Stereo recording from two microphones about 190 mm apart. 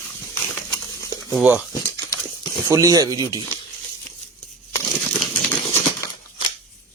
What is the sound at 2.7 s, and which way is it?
Speech, 15° right (ahead or behind).